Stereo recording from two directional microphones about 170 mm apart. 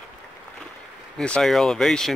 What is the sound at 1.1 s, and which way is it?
Speech, 5° left (ahead or behind).